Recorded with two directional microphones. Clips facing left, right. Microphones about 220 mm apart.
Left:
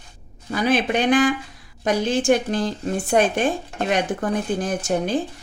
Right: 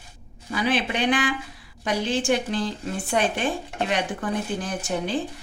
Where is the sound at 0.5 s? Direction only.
45° left (ahead or behind).